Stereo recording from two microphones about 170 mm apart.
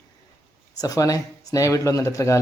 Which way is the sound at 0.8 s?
20° left (ahead or behind).